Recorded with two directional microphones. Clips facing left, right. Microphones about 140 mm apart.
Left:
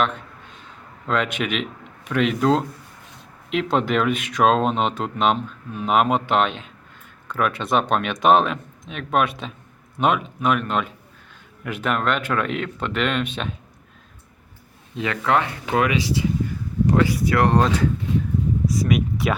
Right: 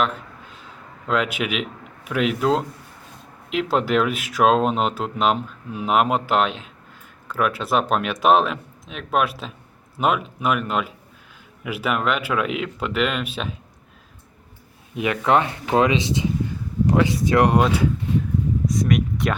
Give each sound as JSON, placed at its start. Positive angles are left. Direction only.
{"t": 0.0, "sound": "a sound", "side_deg": -5}
{"t": 2.0, "sound": "speech", "side_deg": -5}
{"t": 14.9, "sound": "speech", "side_deg": -15}
{"t": 18.6, "sound": "speech", "side_deg": 5}